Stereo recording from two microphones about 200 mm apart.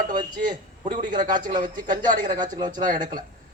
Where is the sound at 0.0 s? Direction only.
40° right (ahead or behind).